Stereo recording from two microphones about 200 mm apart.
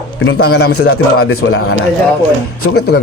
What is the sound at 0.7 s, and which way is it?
Mantra, 90° left.